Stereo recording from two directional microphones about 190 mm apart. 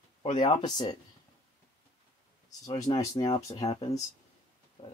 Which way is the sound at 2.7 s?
20° left (ahead or behind).